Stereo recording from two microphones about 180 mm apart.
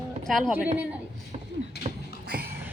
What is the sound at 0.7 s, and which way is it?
Speech, 5° right (ahead or behind).